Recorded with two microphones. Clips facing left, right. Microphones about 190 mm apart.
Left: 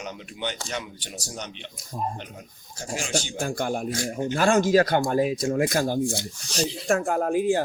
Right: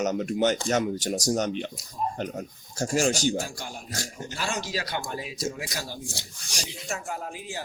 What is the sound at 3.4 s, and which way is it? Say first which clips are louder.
A man's voice: left 10 dB; 55° left (ahead or behind).